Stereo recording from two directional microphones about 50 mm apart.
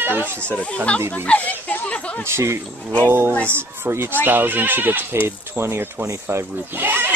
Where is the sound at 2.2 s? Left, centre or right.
Right.